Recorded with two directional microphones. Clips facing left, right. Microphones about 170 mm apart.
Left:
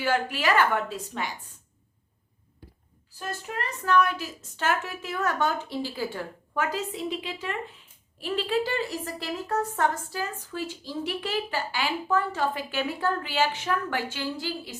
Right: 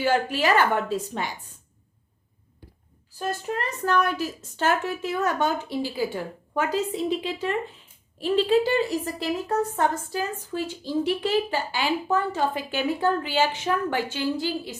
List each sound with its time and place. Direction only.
0.0 s a woman's voice: 30° right (ahead or behind)
3.2 s a woman's voice: 35° right (ahead or behind)
5.1 s a woman's voice: 20° right (ahead or behind)
6.5 s a woman's voice: 25° right (ahead or behind)
8.2 s a woman's voice: 25° right (ahead or behind)